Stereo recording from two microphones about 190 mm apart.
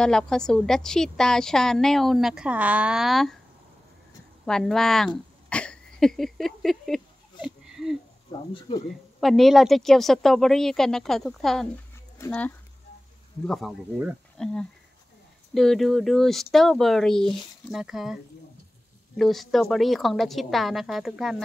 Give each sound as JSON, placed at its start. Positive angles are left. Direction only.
{"t": 0.0, "sound": "speech", "side_deg": 5}
{"t": 4.5, "sound": "speech", "side_deg": 5}
{"t": 7.4, "sound": "a sound", "side_deg": 0}
{"t": 8.3, "sound": "speech", "side_deg": 25}
{"t": 9.2, "sound": "speech", "side_deg": 0}